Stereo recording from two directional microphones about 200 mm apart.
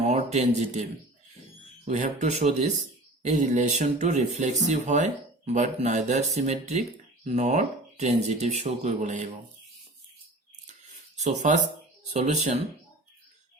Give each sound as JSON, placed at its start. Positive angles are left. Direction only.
{"t": 0.0, "sound": "speech", "side_deg": -35}
{"t": 11.2, "sound": "speech", "side_deg": -35}